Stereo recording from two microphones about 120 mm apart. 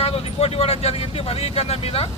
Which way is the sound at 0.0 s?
55° left (ahead or behind).